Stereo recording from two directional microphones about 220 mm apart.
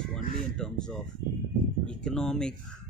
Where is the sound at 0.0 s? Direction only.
5° left (ahead or behind).